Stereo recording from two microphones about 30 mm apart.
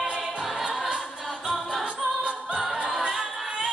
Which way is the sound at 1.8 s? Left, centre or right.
Right.